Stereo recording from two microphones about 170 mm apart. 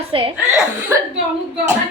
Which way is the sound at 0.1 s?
30° right (ahead or behind).